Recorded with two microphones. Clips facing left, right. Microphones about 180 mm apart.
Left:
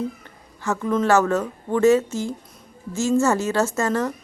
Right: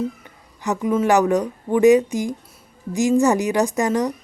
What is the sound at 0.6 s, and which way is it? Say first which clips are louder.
Speech: right 2 dB; 15° right (ahead or behind).